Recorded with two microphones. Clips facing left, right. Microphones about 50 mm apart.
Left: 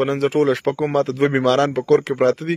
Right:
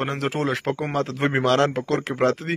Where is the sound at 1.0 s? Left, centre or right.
Right.